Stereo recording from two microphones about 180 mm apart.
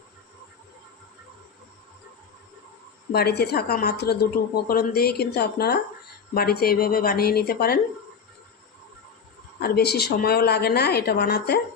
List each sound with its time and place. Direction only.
3.1 s a woman's voice: 65° left (ahead or behind)
9.6 s a woman's voice: 60° left (ahead or behind)